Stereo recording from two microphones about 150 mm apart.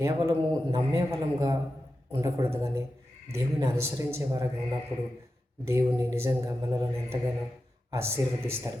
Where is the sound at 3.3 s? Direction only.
20° right (ahead or behind).